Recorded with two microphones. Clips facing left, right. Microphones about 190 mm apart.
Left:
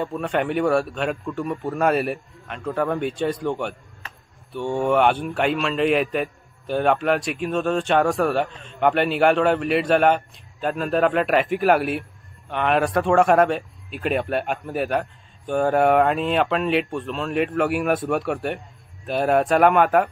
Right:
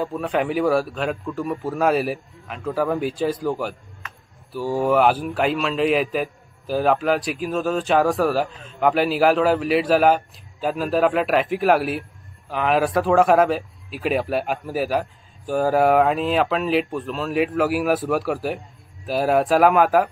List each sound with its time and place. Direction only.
0.0 s a man's voice: centre (ahead or behind)
4.0 s a sound: 35° left (ahead or behind)
4.5 s a man's voice: 5° right (ahead or behind)